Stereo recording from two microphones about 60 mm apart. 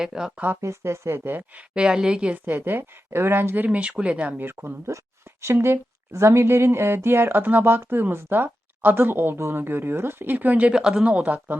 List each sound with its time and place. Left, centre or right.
0.0 s speech: centre
0.3 s speech: right
0.6 s speech: right
1.7 s speech: centre
2.5 s speech: right
4.9 s speech: right
5.5 s speech: right
10.7 s speech: centre